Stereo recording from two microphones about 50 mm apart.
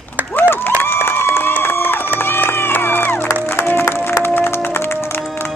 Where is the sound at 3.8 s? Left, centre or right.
Left.